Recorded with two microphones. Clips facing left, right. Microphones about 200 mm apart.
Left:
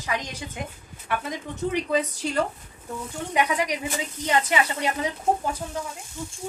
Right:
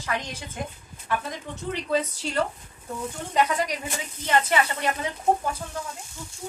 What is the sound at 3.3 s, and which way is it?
Speech, 15° left (ahead or behind).